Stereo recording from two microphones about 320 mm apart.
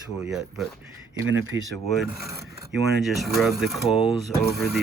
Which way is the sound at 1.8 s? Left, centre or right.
Centre.